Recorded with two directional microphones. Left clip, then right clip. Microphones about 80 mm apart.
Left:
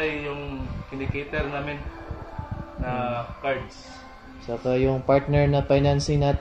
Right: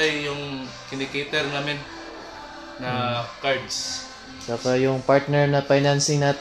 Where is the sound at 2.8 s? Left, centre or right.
Right.